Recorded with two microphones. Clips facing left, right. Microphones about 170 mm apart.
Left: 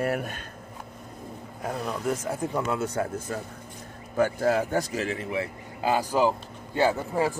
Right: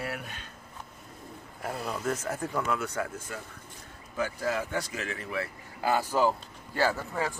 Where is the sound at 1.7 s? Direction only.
5° right (ahead or behind).